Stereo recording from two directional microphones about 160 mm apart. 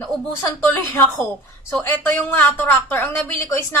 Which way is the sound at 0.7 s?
15° left (ahead or behind).